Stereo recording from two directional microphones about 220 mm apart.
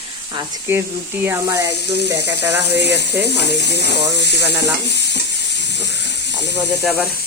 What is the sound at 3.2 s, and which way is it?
Stir, 50° left (ahead or behind).